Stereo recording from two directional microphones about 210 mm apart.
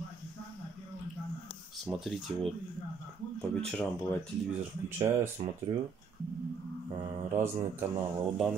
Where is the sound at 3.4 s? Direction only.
5° left (ahead or behind).